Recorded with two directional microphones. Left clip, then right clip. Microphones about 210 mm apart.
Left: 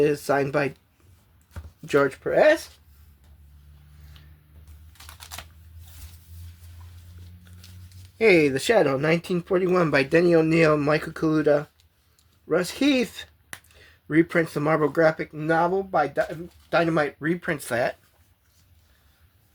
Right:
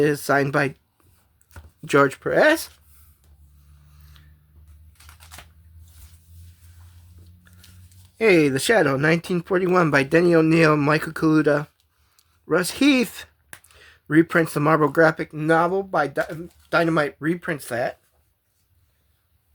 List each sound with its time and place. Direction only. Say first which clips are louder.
0.0 s speech: right 2 dB; 30° right (ahead or behind)
1.8 s speech: right 4 dB; 35° right (ahead or behind)
4.1 s a sound: left 1 dB; 20° right (ahead or behind)
8.2 s speech: right 1 dB; 25° right (ahead or behind); by 17.9 s 5° right (ahead or behind)